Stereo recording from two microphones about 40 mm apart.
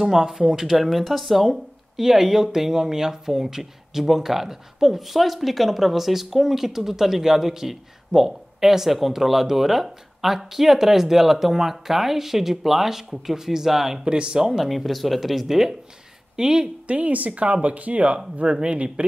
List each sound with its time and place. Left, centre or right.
0.0 s speech: centre
14.0 s speech: right
14.6 s speech: centre
16.8 s speech: right